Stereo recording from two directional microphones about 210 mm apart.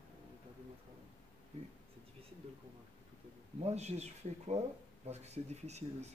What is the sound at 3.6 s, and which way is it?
Speech, 30° right (ahead or behind).